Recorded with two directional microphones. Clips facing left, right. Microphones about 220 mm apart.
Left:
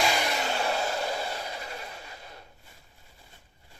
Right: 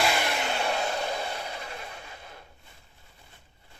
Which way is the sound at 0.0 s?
Centre (ahead or behind).